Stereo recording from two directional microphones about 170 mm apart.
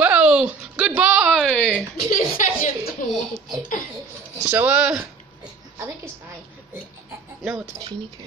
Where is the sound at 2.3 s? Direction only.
60° left (ahead or behind).